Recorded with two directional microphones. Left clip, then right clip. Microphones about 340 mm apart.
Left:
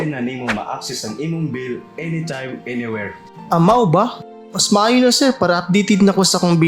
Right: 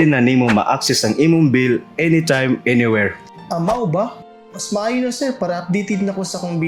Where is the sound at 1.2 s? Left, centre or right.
Right.